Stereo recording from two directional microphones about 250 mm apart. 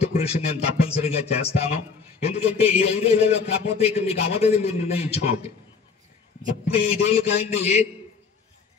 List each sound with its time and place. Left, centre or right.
0.2 s a man's voice: left
6.4 s a man's voice: left